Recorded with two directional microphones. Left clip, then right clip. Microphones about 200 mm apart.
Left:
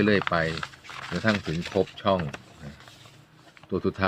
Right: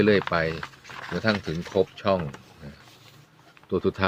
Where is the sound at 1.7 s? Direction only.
5° right (ahead or behind).